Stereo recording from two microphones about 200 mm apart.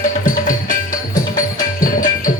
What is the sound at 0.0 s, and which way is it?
Music, 40° left (ahead or behind).